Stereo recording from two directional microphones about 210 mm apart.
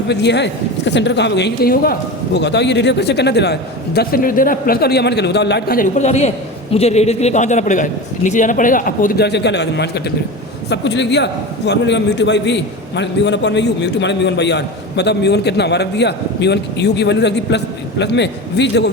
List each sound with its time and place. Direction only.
0.1 s a man's voice: 55° left (ahead or behind)